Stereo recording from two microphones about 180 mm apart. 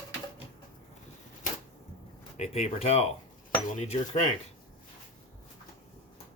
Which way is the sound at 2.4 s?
35° left (ahead or behind).